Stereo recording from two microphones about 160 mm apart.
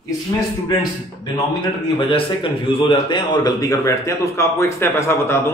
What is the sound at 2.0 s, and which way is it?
A man's voice, 30° left (ahead or behind).